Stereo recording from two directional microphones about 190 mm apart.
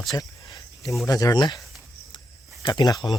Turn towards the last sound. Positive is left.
turn(degrees=20)  # may be behind; listen again after turning